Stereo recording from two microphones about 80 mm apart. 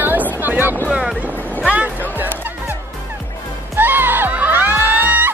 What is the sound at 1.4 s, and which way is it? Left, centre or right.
Music, left.